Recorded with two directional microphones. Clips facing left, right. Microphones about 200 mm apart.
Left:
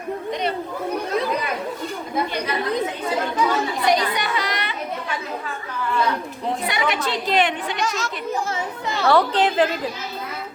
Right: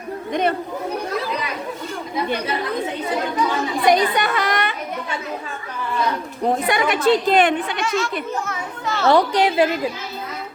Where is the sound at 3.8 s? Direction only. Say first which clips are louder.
Right 5 dB; 50° right (ahead or behind).